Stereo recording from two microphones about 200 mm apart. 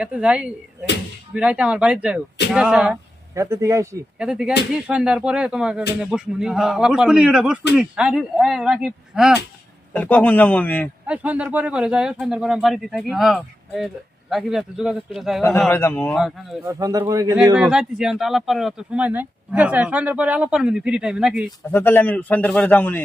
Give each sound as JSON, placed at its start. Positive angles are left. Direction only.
{"t": 0.0, "sound": "speech", "side_deg": -5}
{"t": 4.2, "sound": "speech", "side_deg": -5}
{"t": 9.9, "sound": "a man's voice", "side_deg": 5}
{"t": 11.0, "sound": "a man's voice", "side_deg": -5}
{"t": 16.6, "sound": "speech", "side_deg": -15}
{"t": 17.5, "sound": "speech", "side_deg": -5}
{"t": 21.7, "sound": "a man's voice", "side_deg": 10}